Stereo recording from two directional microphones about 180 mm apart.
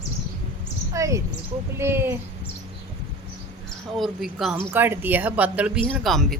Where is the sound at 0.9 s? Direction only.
15° right (ahead or behind).